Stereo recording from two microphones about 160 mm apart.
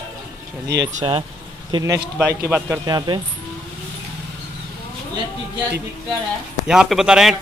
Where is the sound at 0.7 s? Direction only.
90° right.